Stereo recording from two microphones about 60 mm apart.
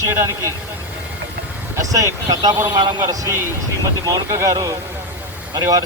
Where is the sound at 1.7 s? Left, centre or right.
Right.